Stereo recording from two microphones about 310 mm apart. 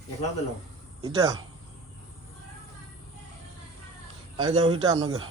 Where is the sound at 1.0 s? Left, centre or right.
Centre.